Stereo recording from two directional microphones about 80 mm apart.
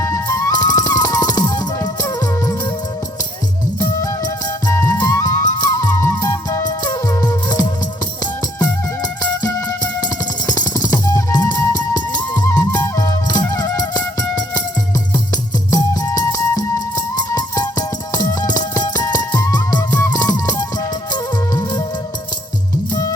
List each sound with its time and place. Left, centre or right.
0.0 s music: left
0.5 s music: left
4.0 s music: left
6.0 s music: left
9.4 s music: left
15.7 s music: left